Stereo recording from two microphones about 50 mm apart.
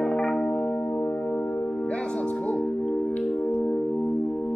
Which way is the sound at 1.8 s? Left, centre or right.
Centre.